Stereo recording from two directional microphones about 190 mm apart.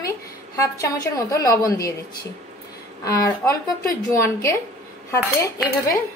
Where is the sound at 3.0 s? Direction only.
15° left (ahead or behind).